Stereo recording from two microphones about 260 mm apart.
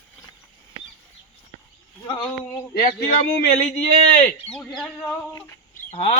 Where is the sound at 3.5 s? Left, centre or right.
Left.